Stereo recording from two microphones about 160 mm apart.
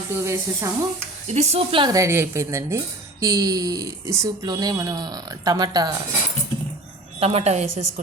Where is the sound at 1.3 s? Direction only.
45° right (ahead or behind); by 6.0 s 25° right (ahead or behind).